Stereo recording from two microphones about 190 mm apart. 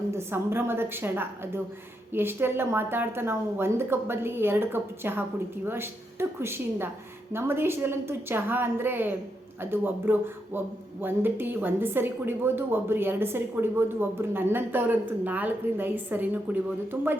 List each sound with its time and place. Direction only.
0.1 s a woman's voice: 15° right (ahead or behind)